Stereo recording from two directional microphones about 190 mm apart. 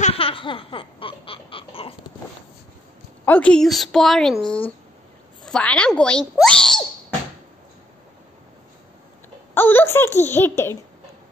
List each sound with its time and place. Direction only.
0.0 s baby laughter: 30° left (ahead or behind)
3.3 s a woman's voice: 5° left (ahead or behind)
9.5 s a sound: 10° left (ahead or behind)
10.2 s a child's voice: 10° left (ahead or behind)